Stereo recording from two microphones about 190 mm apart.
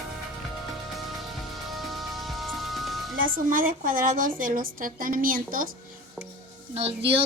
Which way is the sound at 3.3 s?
45° right (ahead or behind).